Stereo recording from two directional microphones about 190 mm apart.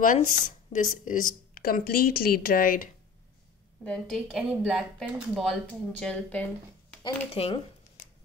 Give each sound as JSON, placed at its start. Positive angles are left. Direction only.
{"t": 0.0, "sound": "speech", "side_deg": 45}
{"t": 3.8, "sound": "speech", "side_deg": 5}
{"t": 7.3, "sound": "speech", "side_deg": 30}